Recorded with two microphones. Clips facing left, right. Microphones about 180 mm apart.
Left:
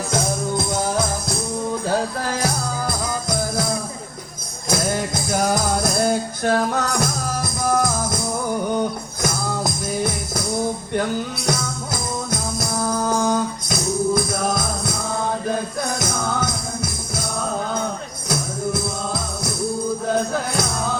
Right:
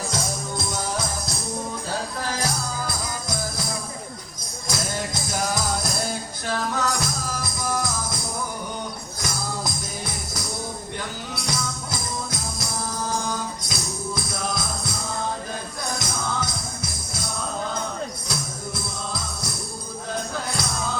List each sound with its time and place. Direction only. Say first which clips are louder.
0.1 s music: left 7 dB; 55° left (ahead or behind)
2.4 s music: left 4 dB; 55° left (ahead or behind)
4.7 s music: left 7 dB; 55° left (ahead or behind)
9.2 s music: left 7 dB; 55° left (ahead or behind)
11.4 s music: left 6 dB; 55° left (ahead or behind)
18.3 s music: left 8 dB; 55° left (ahead or behind)